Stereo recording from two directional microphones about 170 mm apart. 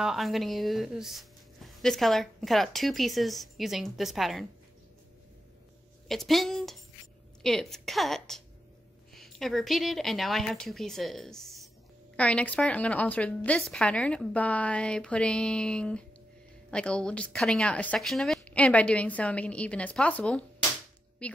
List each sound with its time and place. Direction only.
0.0 s speech: centre (ahead or behind)
6.0 s a woman's voice: centre (ahead or behind)